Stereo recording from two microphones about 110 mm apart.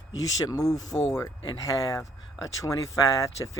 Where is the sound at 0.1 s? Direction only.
30° left (ahead or behind).